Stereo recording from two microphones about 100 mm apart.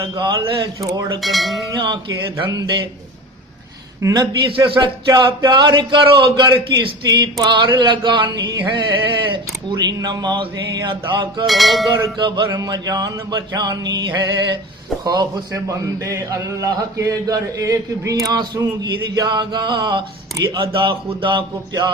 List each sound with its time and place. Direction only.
0.0 s a man's voice: 40° right (ahead or behind)
1.2 s cowbell: centre (ahead or behind)
2.5 s speech: 45° right (ahead or behind)
4.1 s speech: 45° right (ahead or behind)
11.4 s cowbell: centre (ahead or behind)
12.1 s speech: 55° right (ahead or behind)
12.5 s a man's voice: 40° right (ahead or behind)